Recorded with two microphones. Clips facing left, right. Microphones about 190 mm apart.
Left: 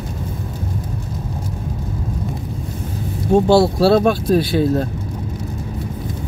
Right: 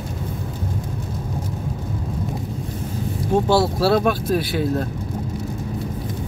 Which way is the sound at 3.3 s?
30° left (ahead or behind).